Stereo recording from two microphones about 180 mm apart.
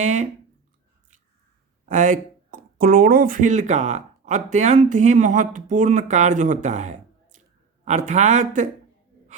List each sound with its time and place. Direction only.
0.0 s speech: 40° right (ahead or behind)
1.9 s speech: 45° right (ahead or behind)